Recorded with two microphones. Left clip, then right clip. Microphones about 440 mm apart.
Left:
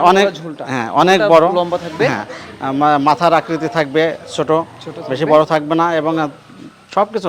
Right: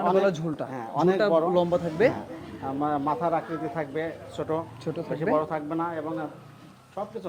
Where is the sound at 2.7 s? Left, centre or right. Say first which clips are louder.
Left 14 dB; left.